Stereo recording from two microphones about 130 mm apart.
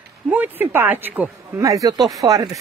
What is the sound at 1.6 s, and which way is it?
Speech, 25° right (ahead or behind).